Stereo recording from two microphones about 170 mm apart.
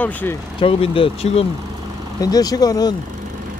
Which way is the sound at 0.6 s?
30° left (ahead or behind).